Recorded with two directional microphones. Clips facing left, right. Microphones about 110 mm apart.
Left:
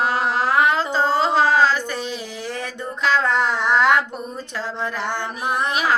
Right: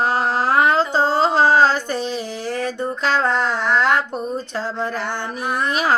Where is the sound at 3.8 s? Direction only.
30° right (ahead or behind).